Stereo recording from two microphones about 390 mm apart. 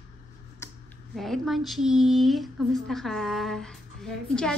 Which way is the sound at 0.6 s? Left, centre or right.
Centre.